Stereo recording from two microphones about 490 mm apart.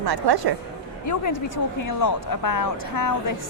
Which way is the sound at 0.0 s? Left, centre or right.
Right.